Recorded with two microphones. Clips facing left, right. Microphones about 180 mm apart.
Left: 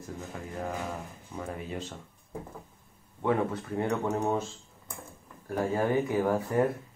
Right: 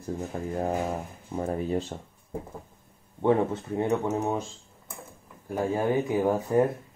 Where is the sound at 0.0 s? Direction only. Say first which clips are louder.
Right 7 dB; 35° right (ahead or behind).